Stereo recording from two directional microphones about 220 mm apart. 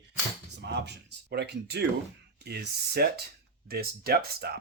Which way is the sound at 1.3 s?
50° right (ahead or behind).